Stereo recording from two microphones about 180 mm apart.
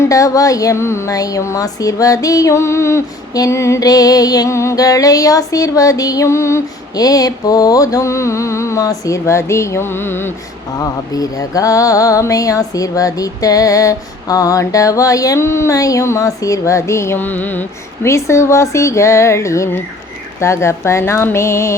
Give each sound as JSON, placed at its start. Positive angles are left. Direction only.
{"t": 0.0, "sound": "a woman's voice", "side_deg": 20}